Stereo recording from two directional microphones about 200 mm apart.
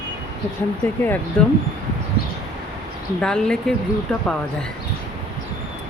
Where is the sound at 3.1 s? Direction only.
5° left (ahead or behind).